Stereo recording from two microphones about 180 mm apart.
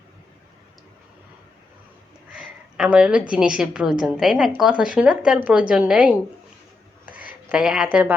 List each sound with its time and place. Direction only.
2.3 s a woman's voice: centre (ahead or behind)
7.5 s a woman's voice: 5° right (ahead or behind)